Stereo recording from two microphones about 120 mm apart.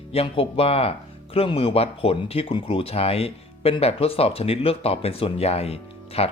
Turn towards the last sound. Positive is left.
turn(degrees=55)  # may be behind; listen again after turning